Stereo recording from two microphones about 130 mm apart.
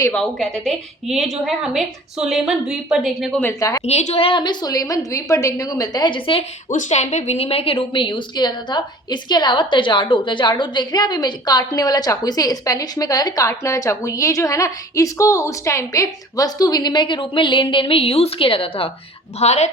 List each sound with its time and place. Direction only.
0.1 s a woman's voice: 5° left (ahead or behind)
3.4 s a woman's voice: 25° left (ahead or behind)
3.8 s a woman's voice: 55° left (ahead or behind); by 6.4 s 40° left (ahead or behind)
6.7 s a woman's voice: 70° left (ahead or behind); by 18.9 s 45° left (ahead or behind)
19.4 s speech: 60° left (ahead or behind)